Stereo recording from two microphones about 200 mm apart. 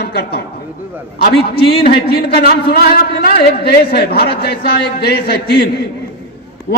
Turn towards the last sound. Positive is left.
turn(degrees=50)  # may be behind; listen again after turning